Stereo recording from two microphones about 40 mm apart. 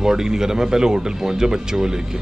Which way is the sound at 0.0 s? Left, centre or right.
Centre.